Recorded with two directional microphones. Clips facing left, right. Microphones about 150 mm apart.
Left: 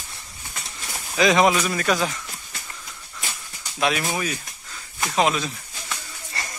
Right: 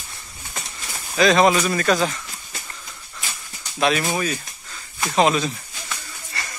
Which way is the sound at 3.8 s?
10° left (ahead or behind).